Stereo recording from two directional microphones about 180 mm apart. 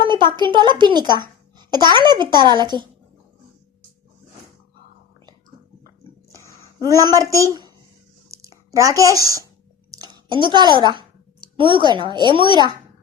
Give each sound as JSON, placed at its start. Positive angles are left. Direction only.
{"t": 0.0, "sound": "speech", "side_deg": -25}
{"t": 6.3, "sound": "a sound", "side_deg": -20}
{"t": 10.0, "sound": "a woman's voice", "side_deg": -25}